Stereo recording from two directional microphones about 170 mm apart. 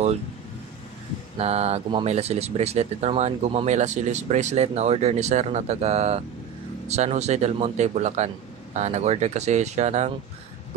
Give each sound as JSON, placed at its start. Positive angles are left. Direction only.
{"t": 1.4, "sound": "speech", "side_deg": -40}